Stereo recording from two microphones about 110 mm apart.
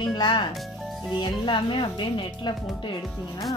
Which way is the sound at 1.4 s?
45° left (ahead or behind).